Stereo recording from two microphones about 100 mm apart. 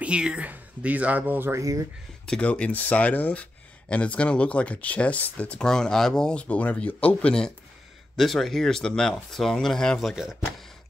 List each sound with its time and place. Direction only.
0.0 s speech: 10° right (ahead or behind)
1.6 s speech: 35° right (ahead or behind)
2.2 s speech: 10° left (ahead or behind)